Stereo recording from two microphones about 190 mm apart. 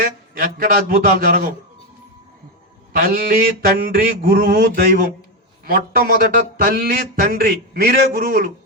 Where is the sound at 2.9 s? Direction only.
55° right (ahead or behind).